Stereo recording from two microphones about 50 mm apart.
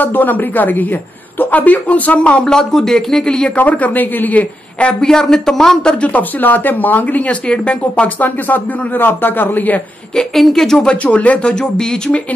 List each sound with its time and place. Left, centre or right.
0.0 s a man's voice: left
2.5 s speech: centre
3.5 s a man's voice: left
10.1 s speech: centre
10.9 s speech: left